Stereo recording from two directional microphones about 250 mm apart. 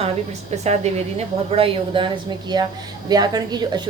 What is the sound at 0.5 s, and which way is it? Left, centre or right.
A woman's voice, right.